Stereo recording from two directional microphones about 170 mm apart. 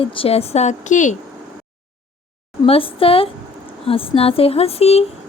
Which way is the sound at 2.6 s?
35° left (ahead or behind).